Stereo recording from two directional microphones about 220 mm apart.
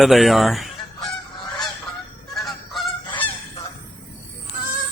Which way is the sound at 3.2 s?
25° left (ahead or behind).